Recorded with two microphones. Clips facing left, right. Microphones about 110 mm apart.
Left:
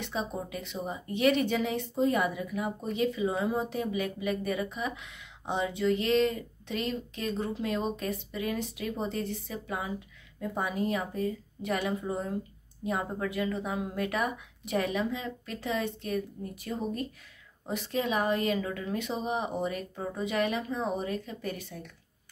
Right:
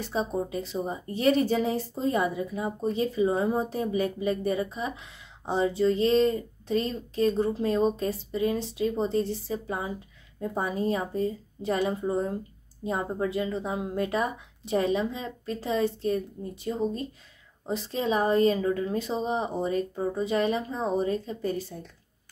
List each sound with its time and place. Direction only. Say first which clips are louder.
0.0 s a woman's voice: right 5 dB; 35° right (ahead or behind)